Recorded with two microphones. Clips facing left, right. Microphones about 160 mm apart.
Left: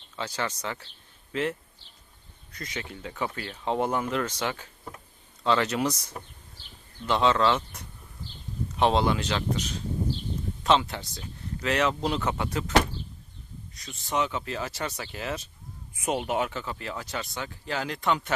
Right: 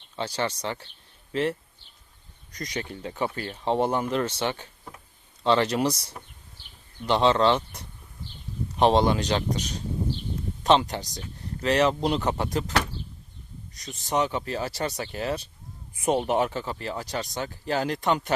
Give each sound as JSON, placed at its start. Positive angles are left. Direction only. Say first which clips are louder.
{"t": 0.2, "sound": "speech", "louder": "right 3 dB", "side_deg": -30}
{"t": 8.8, "sound": "speech", "louder": "right 3 dB", "side_deg": -35}
{"t": 13.8, "sound": "speech", "louder": "right 3 dB", "side_deg": -40}